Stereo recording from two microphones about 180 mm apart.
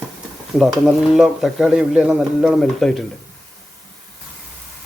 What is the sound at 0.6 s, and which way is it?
Speech, centre (ahead or behind).